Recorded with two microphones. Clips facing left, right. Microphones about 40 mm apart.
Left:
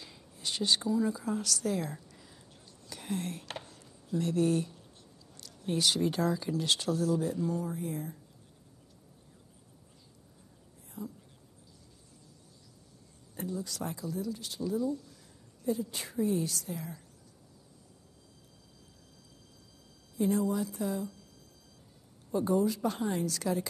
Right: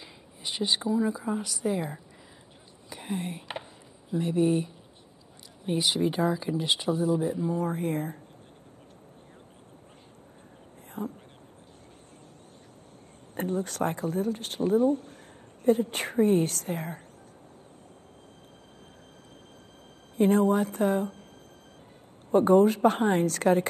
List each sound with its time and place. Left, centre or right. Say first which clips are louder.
0.0 s speech: right 1 dB; right
2.9 s a sound: right 3 dB; right
4.1 s speech: right 4 dB; right
7.6 s speech: right 7 dB; right
11.0 s whispering: right 7 dB; right
13.4 s speech: right 8 dB; right
20.2 s speech: right 7 dB; right
22.3 s speech: right 9 dB; right